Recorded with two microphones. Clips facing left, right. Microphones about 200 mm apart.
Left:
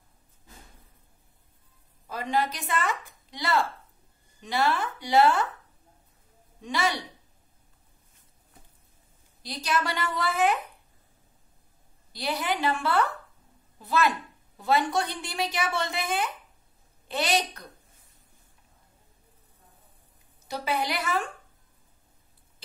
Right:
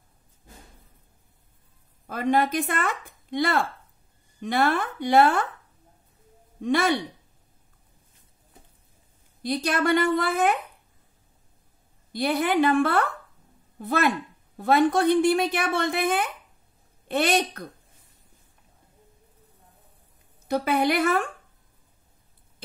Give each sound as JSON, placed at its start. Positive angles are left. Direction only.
{"t": 2.0, "sound": "a woman's voice", "side_deg": -55}
{"t": 6.6, "sound": "a woman's voice", "side_deg": -55}
{"t": 9.4, "sound": "a woman's voice", "side_deg": -55}
{"t": 12.1, "sound": "a woman's voice", "side_deg": -55}
{"t": 20.4, "sound": "a woman's voice", "side_deg": -55}